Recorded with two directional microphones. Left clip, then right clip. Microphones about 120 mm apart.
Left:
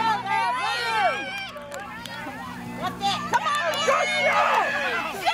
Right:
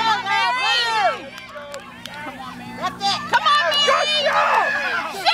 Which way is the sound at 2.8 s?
40° right (ahead or behind).